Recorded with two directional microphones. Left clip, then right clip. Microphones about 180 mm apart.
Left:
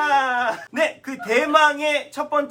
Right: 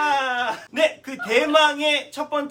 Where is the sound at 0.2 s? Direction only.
Centre (ahead or behind).